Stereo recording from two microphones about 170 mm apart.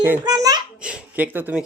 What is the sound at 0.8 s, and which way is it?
Speech, 5° right (ahead or behind).